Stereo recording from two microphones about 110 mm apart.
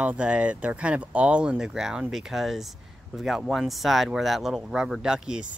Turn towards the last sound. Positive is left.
turn(degrees=-5)  # may be behind; listen again after turning